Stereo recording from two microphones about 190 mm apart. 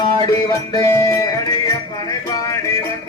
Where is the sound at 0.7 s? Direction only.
15° left (ahead or behind).